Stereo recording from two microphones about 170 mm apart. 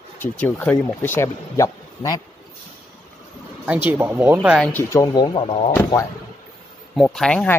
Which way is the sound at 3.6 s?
10° right (ahead or behind).